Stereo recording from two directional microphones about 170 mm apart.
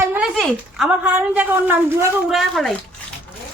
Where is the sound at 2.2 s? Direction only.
Centre (ahead or behind).